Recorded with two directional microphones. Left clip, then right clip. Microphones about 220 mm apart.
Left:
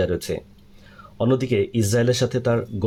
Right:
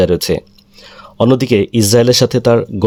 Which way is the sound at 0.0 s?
50° right (ahead or behind).